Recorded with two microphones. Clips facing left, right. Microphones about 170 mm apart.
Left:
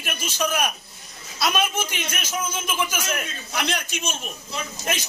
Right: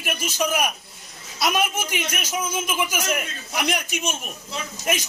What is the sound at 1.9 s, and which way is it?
Speech, 15° right (ahead or behind).